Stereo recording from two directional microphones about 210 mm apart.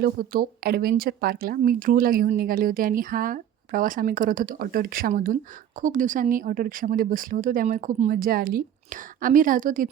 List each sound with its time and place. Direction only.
0.0 s a woman's voice: 45° right (ahead or behind)